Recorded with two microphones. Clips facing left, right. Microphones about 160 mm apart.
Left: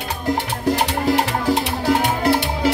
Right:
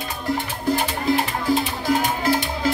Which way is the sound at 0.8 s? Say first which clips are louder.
Left 3 dB; 75° left (ahead or behind).